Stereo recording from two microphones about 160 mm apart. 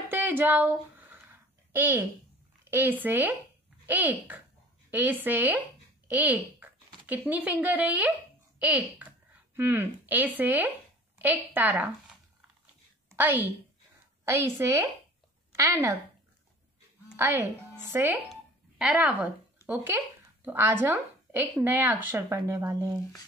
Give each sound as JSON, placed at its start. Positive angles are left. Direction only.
{"t": 0.1, "sound": "a sound", "side_deg": -10}
{"t": 2.6, "sound": "a woman's voice", "side_deg": -15}
{"t": 17.2, "sound": "a woman's voice", "side_deg": -15}